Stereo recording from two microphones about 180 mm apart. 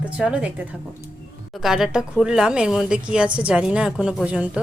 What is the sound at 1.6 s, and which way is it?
Speech, centre (ahead or behind).